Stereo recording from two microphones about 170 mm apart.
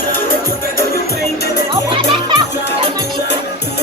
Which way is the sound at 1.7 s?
25° right (ahead or behind).